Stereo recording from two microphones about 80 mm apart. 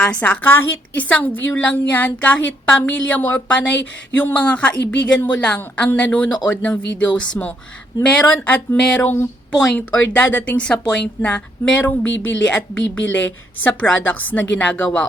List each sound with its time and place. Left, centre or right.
0.0 s a woman's voice: centre
0.4 s a woman's voice: left